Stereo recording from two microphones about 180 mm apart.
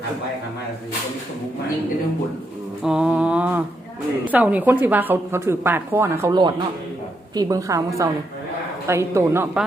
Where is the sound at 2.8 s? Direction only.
5° right (ahead or behind).